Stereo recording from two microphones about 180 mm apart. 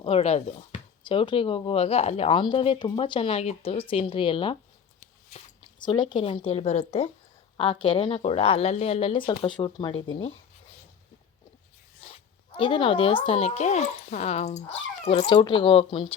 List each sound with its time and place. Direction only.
0.0 s speech: 35° left (ahead or behind)
5.8 s a woman's voice: 25° left (ahead or behind)
11.9 s a woman's voice: 30° left (ahead or behind)
15.3 s speech: 30° left (ahead or behind)